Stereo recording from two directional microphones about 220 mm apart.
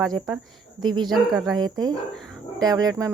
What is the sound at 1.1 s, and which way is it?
Speech, centre (ahead or behind).